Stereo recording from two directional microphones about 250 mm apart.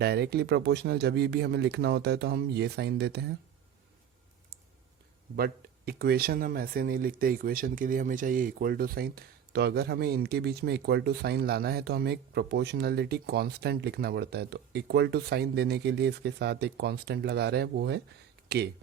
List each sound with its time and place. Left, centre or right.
0.0 s speech: right
5.4 s speech: right